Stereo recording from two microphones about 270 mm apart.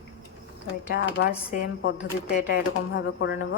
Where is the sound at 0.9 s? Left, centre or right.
Left.